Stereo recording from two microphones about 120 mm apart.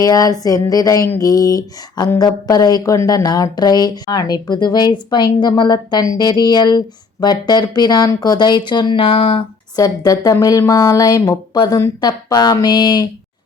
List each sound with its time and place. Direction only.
0.0 s speech: 30° left (ahead or behind); by 9.4 s 50° left (ahead or behind)
9.7 s speech: 30° left (ahead or behind)